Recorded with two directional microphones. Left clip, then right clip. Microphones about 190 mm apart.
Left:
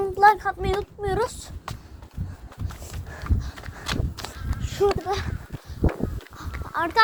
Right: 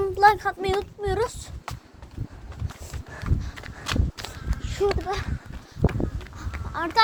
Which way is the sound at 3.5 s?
5° left (ahead or behind).